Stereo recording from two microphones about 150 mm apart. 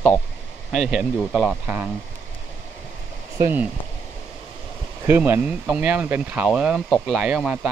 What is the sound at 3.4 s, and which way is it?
Speech, 15° right (ahead or behind).